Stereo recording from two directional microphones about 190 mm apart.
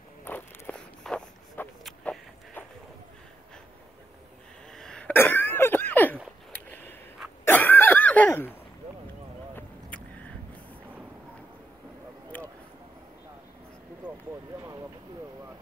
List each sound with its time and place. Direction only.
0.2 s walk: 10° left (ahead or behind)
4.7 s throat clearing: 5° left (ahead or behind)
6.7 s a sound: 10° left (ahead or behind)
7.4 s cough: 10° left (ahead or behind)
9.6 s vehicle: 10° left (ahead or behind)
12.3 s a sound: 10° left (ahead or behind)
14.0 s vehicle: 10° right (ahead or behind)